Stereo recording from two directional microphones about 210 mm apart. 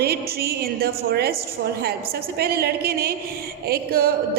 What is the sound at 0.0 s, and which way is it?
A woman's voice, 50° right (ahead or behind).